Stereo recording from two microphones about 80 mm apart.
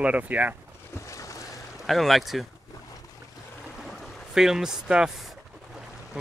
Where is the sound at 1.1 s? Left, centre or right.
Left.